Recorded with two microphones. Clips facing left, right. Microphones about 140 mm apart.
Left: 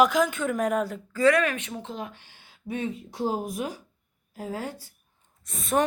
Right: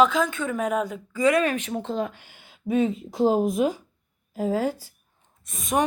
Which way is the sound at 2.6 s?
90° right.